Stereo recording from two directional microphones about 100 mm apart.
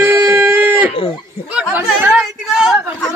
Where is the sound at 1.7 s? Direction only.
20° right (ahead or behind).